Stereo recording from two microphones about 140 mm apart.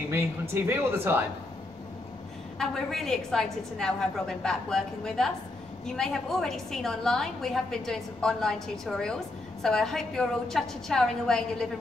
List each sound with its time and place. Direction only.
0.7 s speech: 15° right (ahead or behind)
2.6 s a woman's voice: 5° left (ahead or behind)